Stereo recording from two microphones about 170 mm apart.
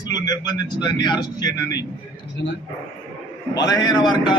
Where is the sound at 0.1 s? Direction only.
25° left (ahead or behind).